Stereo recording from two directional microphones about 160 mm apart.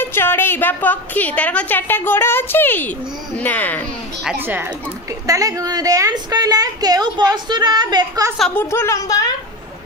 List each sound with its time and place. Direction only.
0.0 s a woman's voice: 15° left (ahead or behind)
4.2 s speech: 10° right (ahead or behind)
5.2 s a woman's voice: 20° right (ahead or behind)
8.4 s a woman's voice: 5° left (ahead or behind)
8.6 s a woman's voice: 15° left (ahead or behind)